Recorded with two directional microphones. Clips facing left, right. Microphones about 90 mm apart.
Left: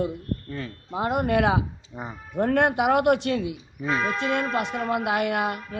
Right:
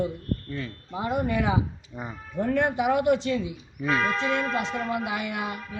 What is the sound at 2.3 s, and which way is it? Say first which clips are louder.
A woman's voice: left 3 dB; 65° left (ahead or behind).